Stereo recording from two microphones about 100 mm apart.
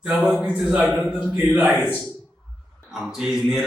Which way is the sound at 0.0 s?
5° right (ahead or behind).